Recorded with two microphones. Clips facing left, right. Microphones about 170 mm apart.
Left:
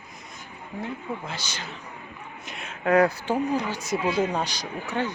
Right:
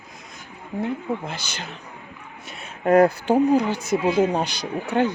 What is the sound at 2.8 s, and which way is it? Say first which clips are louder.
Speech: right 4 dB; 40° right (ahead or behind).